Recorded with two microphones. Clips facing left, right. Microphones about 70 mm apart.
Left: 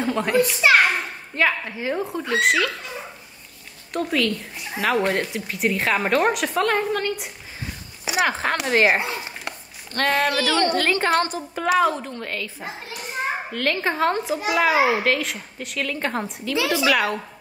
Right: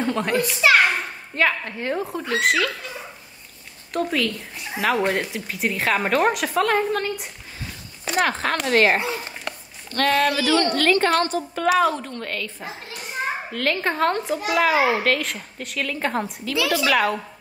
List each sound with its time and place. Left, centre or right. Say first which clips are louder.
0.0 s speech: left 2 dB; centre
3.9 s speech: left 1 dB; centre
9.9 s speech: right 1 dB; left
10.3 s speech: right 2 dB; centre
10.6 s a woman's voice: right 1 dB; left
11.1 s speech: even; centre